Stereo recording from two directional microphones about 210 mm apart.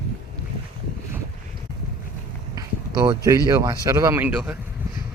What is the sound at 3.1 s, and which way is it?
Speech, 15° right (ahead or behind).